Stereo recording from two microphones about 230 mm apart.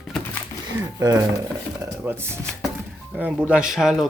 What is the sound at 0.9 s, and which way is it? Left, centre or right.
Speech, centre.